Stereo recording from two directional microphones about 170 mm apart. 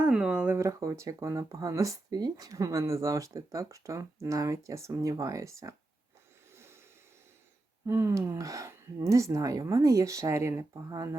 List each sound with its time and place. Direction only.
0.0 s speech: 5° right (ahead or behind)
6.5 s a sound: 15° right (ahead or behind)
7.9 s speech: 15° right (ahead or behind)